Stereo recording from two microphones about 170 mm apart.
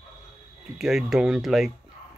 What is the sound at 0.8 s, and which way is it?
Speech, 5° right (ahead or behind).